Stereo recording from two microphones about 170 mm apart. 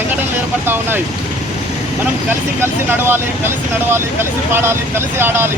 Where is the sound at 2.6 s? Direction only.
10° right (ahead or behind).